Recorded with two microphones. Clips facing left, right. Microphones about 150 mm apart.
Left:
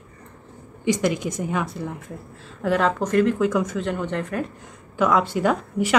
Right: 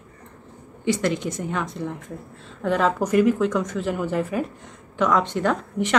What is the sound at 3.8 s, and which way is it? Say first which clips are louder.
Speech: right 1 dB; 5° right (ahead or behind).